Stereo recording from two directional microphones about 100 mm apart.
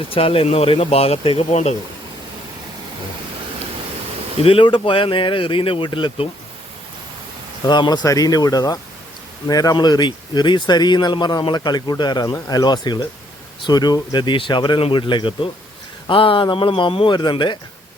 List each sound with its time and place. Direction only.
0.1 s speech: 70° left (ahead or behind); by 1.7 s 85° left
4.4 s speech: 60° left (ahead or behind)
7.6 s speech: 45° left (ahead or behind)
8.0 s speech: 35° left (ahead or behind); by 17.6 s 50° left (ahead or behind)